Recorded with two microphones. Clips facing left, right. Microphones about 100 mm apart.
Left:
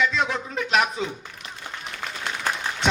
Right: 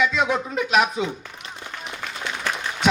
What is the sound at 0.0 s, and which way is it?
Music, 10° right (ahead or behind).